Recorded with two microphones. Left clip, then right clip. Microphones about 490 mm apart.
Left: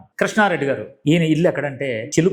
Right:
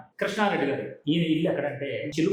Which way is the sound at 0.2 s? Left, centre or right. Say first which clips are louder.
Left 8 dB; left.